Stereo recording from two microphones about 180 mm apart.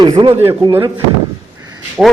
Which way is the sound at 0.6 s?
20° right (ahead or behind).